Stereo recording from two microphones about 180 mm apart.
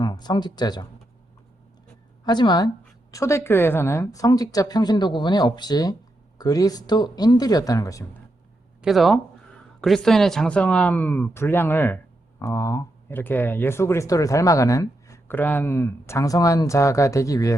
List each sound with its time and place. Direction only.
0.0 s speech: 25° left (ahead or behind)
2.2 s a woman's voice: 25° left (ahead or behind)
8.8 s speech: centre (ahead or behind); by 17.6 s 20° left (ahead or behind)